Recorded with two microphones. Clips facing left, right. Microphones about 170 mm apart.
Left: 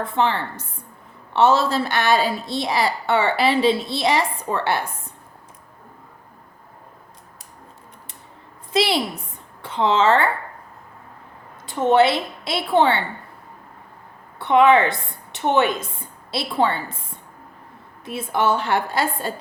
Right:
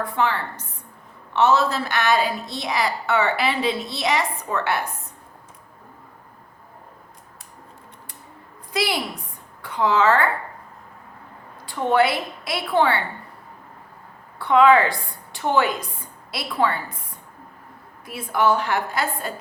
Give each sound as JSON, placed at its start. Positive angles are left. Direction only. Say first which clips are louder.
{"t": 0.0, "sound": "a woman's voice", "louder": "left 2 dB", "side_deg": 25}
{"t": 8.7, "sound": "a woman's voice", "louder": "left 4 dB", "side_deg": 25}
{"t": 11.6, "sound": "a woman's voice", "louder": "left 3 dB", "side_deg": 20}
{"t": 14.3, "sound": "a woman's voice", "louder": "left 1 dB", "side_deg": 20}
{"t": 18.0, "sound": "a woman's voice", "louder": "even", "side_deg": 25}